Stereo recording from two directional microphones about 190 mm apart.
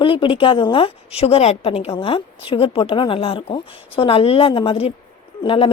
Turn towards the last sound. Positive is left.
turn(degrees=30)  # may be behind; listen again after turning